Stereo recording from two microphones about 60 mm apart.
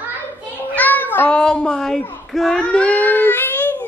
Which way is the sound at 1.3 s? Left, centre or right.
Centre.